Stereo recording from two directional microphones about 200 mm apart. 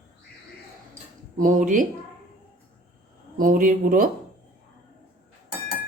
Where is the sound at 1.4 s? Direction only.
40° right (ahead or behind).